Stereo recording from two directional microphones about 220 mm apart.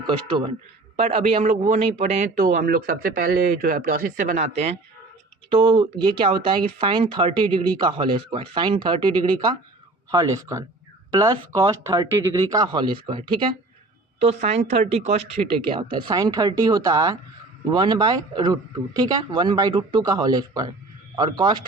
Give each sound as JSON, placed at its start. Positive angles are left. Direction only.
{"t": 0.9, "sound": "a man's voice", "side_deg": -25}